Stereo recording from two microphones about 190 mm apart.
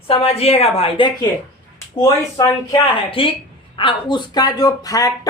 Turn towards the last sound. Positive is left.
turn(degrees=20)  # may be behind; listen again after turning